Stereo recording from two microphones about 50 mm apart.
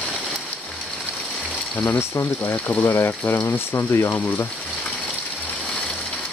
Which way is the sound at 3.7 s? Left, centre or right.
Left.